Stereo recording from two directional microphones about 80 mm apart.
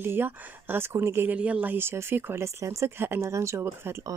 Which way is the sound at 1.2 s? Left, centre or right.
Centre.